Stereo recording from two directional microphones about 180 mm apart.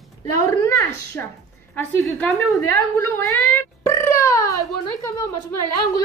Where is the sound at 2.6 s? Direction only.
15° left (ahead or behind).